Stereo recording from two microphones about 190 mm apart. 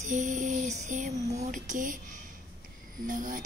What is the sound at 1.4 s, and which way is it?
Music, 40° right (ahead or behind).